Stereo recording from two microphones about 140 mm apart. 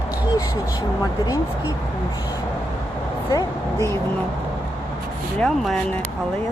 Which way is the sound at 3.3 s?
25° left (ahead or behind).